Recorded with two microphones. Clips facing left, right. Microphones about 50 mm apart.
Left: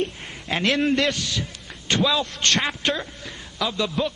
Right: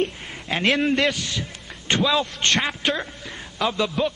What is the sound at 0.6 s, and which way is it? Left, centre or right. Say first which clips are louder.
Speech: right 1 dB; centre.